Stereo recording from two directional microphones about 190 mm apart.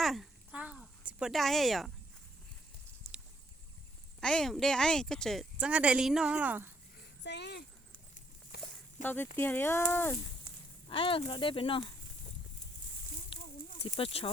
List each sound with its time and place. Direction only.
0.0 s a sound: centre (ahead or behind)
3.1 s boat: centre (ahead or behind)
4.2 s speech: 5° left (ahead or behind)
7.2 s speech: 65° left (ahead or behind)
8.6 s snake: 10° left (ahead or behind)
9.4 s speech: 10° left (ahead or behind)
10.8 s speech: 30° left (ahead or behind)
13.3 s a sound: 25° left (ahead or behind)
13.8 s speech: 30° left (ahead or behind)